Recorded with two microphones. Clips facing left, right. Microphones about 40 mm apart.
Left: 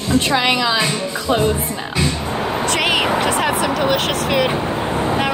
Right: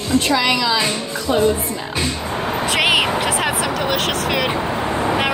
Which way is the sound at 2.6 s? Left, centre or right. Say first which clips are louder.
Right 2 dB; centre.